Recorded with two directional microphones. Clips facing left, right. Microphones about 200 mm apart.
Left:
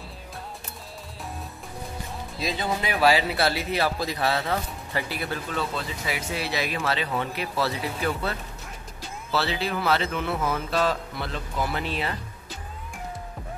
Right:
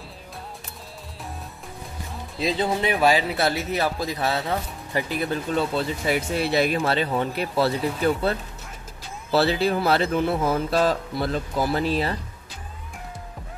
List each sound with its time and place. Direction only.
2.3 s speech: 30° right (ahead or behind)
2.9 s speech: 15° right (ahead or behind)
5.5 s speech: 30° right (ahead or behind)
6.0 s speech: 55° right (ahead or behind)
7.5 s speech: 30° right (ahead or behind)